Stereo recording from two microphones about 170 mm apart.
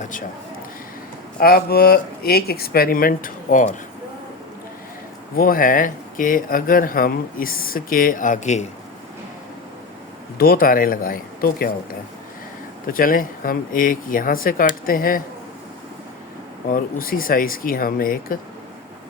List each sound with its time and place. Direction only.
0.0 s a man's voice: 50° left (ahead or behind)
1.4 s speech: 65° left (ahead or behind)
5.4 s speech: 55° left (ahead or behind)
10.3 s speech: 60° left (ahead or behind)
12.9 s speech: 55° left (ahead or behind)
16.6 s speech: 55° left (ahead or behind)